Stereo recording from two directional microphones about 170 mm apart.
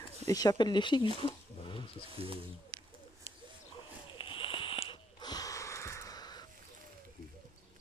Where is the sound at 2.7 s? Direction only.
55° right (ahead or behind).